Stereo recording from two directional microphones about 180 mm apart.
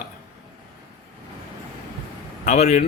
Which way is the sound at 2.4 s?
40° left (ahead or behind).